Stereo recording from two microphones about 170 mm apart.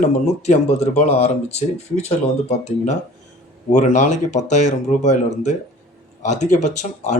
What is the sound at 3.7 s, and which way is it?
Speech, 45° left (ahead or behind).